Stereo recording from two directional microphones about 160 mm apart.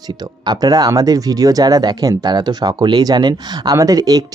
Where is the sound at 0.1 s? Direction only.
25° right (ahead or behind).